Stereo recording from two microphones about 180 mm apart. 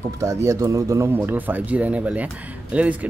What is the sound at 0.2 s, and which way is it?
Speech, 15° right (ahead or behind).